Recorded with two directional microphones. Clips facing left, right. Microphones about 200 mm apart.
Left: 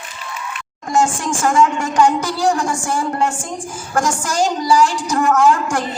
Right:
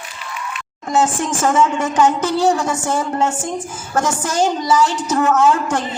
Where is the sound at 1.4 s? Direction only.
25° right (ahead or behind).